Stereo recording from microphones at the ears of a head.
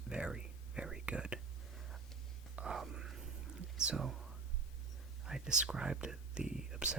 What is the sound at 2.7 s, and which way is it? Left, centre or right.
Whispering, right.